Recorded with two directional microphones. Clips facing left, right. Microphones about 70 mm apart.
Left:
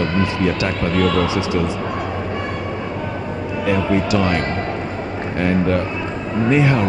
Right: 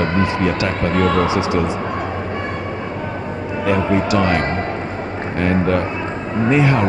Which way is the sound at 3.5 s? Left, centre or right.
Right.